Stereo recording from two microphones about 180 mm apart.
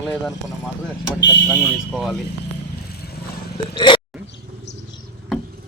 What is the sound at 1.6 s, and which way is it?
Speech, centre (ahead or behind).